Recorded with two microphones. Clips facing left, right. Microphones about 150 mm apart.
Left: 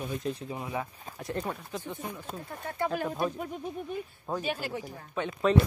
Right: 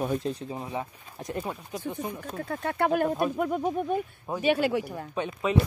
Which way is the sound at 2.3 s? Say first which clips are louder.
Right 7 dB; 70° right (ahead or behind).